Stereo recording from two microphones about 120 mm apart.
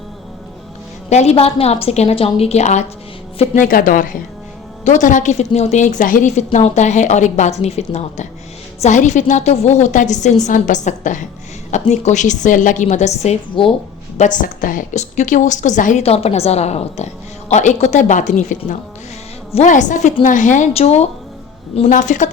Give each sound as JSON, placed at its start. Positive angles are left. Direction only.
{"t": 1.1, "sound": "a woman's voice", "side_deg": 65}
{"t": 4.9, "sound": "a woman's voice", "side_deg": 90}
{"t": 8.8, "sound": "a woman's voice", "side_deg": 85}
{"t": 11.7, "sound": "a woman's voice", "side_deg": 75}
{"t": 13.6, "sound": "speech", "side_deg": 45}
{"t": 14.2, "sound": "a woman's voice", "side_deg": 90}
{"t": 17.5, "sound": "a woman's voice", "side_deg": 75}
{"t": 21.8, "sound": "a woman's voice", "side_deg": 90}